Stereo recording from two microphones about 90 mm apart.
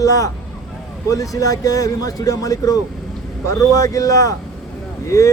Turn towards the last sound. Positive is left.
turn(degrees=35)  # may be behind; listen again after turning